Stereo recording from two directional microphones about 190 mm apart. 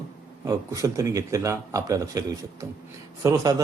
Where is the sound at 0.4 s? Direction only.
15° right (ahead or behind).